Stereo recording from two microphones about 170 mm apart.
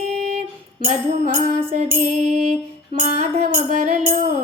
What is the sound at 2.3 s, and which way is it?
Music, 40° right (ahead or behind).